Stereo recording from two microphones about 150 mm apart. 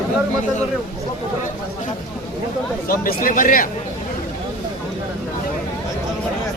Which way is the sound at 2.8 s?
70° left (ahead or behind).